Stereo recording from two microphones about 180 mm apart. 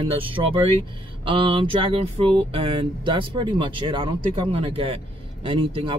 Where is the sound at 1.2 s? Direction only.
30° right (ahead or behind).